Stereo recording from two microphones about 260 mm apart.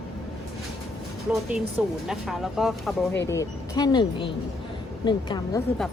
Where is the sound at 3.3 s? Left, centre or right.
Centre.